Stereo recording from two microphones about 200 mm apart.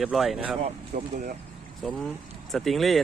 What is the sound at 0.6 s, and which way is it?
Speech, 40° right (ahead or behind).